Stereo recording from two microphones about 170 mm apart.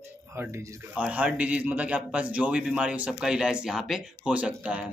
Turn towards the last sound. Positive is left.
turn(degrees=-5)  # may be behind; listen again after turning